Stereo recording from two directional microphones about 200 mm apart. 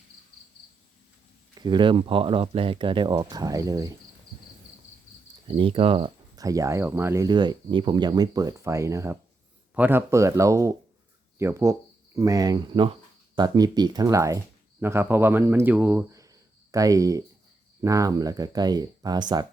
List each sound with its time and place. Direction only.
1.5 s speech: 20° right (ahead or behind)
5.5 s speech: 25° right (ahead or behind)